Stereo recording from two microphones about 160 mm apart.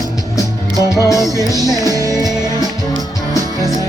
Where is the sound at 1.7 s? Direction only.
25° right (ahead or behind).